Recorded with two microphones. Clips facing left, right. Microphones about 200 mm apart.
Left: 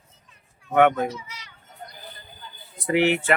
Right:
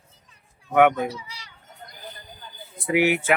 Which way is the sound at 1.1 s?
35° right (ahead or behind).